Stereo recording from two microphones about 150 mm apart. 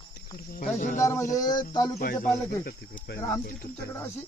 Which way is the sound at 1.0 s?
20° left (ahead or behind).